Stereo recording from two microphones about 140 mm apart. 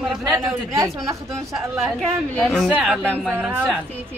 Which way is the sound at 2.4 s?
5° left (ahead or behind).